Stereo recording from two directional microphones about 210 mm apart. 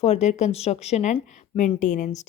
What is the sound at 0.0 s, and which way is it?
Speech, 30° left (ahead or behind).